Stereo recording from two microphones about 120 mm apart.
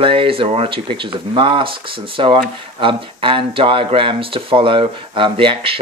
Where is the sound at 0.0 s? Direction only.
45° right (ahead or behind).